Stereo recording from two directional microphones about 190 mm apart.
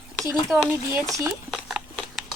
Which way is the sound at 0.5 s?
Centre (ahead or behind).